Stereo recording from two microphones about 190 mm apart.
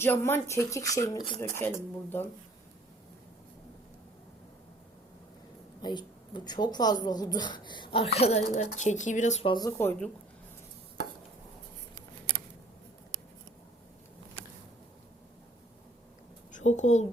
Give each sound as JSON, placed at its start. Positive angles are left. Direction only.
{"t": 0.0, "sound": "speech", "side_deg": 10}
{"t": 5.8, "sound": "a woman's voice", "side_deg": 20}
{"t": 9.5, "sound": "speech", "side_deg": 20}
{"t": 16.5, "sound": "a woman's voice", "side_deg": 40}